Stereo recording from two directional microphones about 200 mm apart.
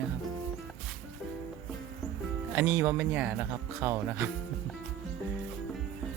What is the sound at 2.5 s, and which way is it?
Speech, 10° right (ahead or behind).